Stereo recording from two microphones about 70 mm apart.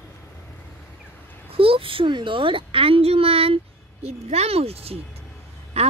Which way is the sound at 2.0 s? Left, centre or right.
Right.